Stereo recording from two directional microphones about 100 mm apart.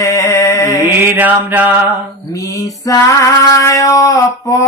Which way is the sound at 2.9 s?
35° left (ahead or behind).